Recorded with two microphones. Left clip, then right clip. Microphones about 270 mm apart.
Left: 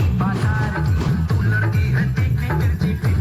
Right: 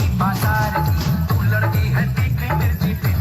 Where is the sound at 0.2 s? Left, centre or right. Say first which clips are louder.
Right 6 dB; centre.